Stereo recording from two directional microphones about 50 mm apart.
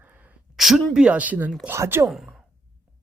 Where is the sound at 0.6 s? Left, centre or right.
Centre.